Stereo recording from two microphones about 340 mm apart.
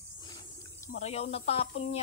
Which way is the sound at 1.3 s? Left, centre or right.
Centre.